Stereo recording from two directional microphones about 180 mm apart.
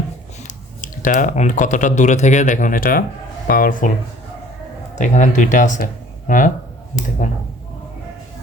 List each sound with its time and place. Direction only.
0.4 s speech: 45° left (ahead or behind)
4.9 s speech: 45° left (ahead or behind)